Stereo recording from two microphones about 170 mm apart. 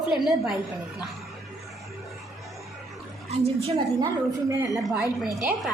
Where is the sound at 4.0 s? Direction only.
20° right (ahead or behind).